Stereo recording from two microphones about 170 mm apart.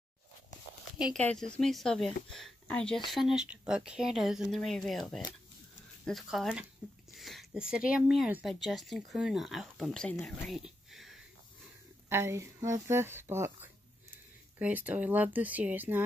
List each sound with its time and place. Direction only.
0.9 s speech: 5° right (ahead or behind)
10.2 s a sound: centre (ahead or behind)
12.1 s speech: 15° right (ahead or behind)